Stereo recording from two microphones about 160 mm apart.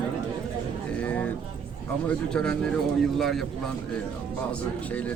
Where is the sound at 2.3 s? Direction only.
5° left (ahead or behind).